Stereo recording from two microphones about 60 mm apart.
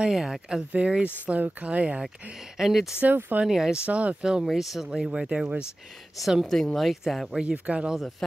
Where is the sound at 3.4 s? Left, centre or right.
Centre.